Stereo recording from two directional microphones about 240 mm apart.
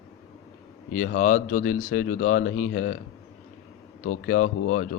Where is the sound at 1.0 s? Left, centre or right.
Left.